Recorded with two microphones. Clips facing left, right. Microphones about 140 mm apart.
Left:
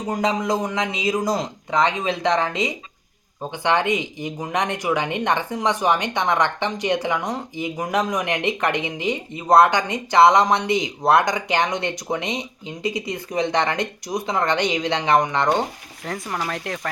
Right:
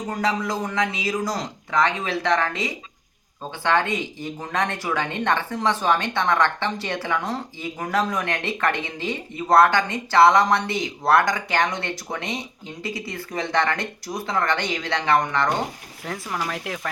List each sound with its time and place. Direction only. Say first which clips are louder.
0.1 s speech: left 4 dB; 15° left (ahead or behind)
16.0 s speech: left 1 dB; centre (ahead or behind)